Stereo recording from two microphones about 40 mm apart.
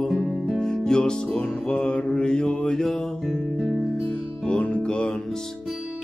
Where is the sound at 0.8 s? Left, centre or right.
Centre.